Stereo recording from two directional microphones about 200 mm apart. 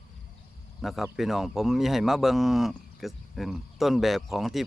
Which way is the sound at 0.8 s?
Centre (ahead or behind).